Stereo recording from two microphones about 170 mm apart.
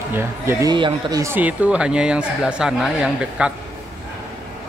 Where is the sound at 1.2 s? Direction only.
10° right (ahead or behind).